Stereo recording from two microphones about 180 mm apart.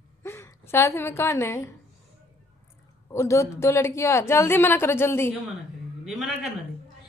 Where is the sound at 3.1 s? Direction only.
15° left (ahead or behind).